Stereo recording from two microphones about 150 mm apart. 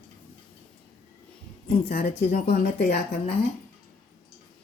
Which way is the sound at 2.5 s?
90° left.